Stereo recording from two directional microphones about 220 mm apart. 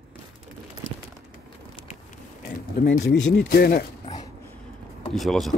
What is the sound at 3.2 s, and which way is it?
Speech, 50° left (ahead or behind).